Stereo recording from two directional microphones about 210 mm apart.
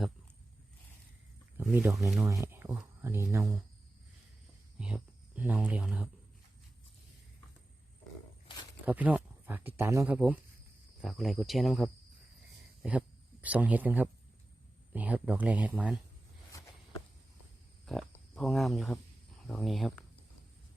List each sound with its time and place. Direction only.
1.5 s speech: 10° right (ahead or behind)
4.8 s speech: 5° right (ahead or behind)
8.9 s speech: 5° right (ahead or behind)
16.5 s walk: 15° left (ahead or behind)
17.8 s speech: centre (ahead or behind)